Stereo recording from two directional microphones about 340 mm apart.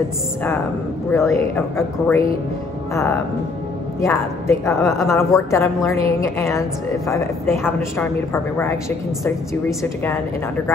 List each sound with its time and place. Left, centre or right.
1.1 s speech: centre
4.0 s speech: centre